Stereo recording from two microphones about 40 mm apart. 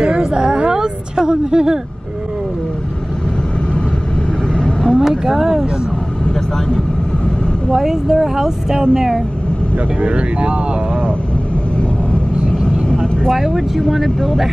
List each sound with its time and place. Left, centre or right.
0.0 s a sound: right
4.6 s vehicle: left
5.0 s vehicle: centre
7.7 s speech: centre
10.0 s speech: right
12.1 s vehicle: left
13.3 s speech: centre